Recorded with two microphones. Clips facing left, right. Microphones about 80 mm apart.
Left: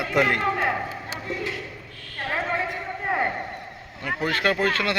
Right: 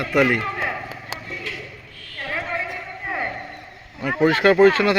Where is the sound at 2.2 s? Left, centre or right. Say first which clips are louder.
Left 1 dB; left.